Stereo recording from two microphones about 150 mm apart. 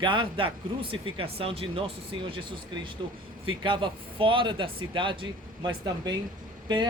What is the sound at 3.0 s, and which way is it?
Speech, 35° right (ahead or behind).